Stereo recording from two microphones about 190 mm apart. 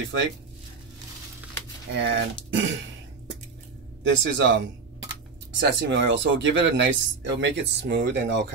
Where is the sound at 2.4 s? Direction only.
80° right.